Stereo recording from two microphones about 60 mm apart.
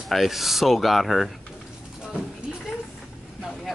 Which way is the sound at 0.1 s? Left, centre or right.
Centre.